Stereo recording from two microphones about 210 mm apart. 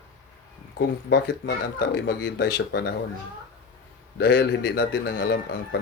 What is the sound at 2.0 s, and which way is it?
Speech, 55° left (ahead or behind).